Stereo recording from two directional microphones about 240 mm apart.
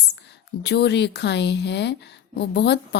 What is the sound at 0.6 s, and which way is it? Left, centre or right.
A woman's voice, left.